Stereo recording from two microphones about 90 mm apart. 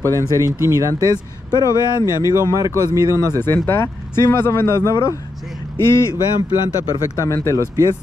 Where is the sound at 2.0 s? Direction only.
35° right (ahead or behind).